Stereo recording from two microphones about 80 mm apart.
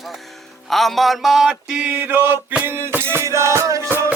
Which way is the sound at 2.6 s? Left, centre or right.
Right.